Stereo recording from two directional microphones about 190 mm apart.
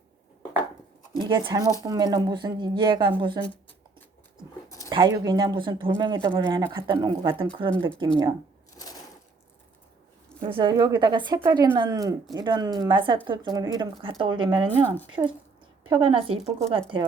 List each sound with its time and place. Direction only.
1.2 s speech: 25° right (ahead or behind)
4.9 s speech: 20° right (ahead or behind)
8.7 s a sound: 20° left (ahead or behind)
10.5 s speech: 25° right (ahead or behind)
16.4 s speech: centre (ahead or behind)
16.7 s speech: 25° right (ahead or behind)